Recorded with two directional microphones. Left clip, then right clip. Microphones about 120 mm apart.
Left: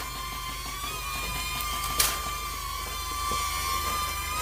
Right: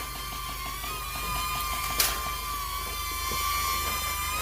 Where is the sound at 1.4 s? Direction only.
40° right (ahead or behind).